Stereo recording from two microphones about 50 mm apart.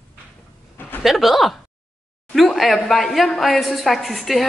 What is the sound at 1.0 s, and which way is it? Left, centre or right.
A woman's voice, centre.